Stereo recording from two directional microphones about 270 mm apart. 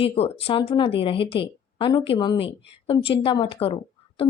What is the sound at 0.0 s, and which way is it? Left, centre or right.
Speech, left.